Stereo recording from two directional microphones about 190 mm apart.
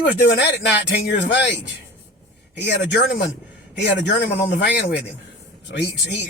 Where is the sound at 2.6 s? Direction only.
60° left (ahead or behind).